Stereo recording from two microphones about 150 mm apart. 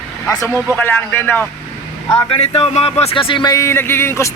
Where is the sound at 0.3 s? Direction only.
20° left (ahead or behind).